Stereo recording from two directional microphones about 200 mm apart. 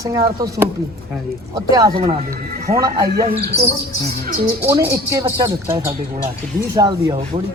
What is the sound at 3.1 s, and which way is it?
Speech, 50° right (ahead or behind).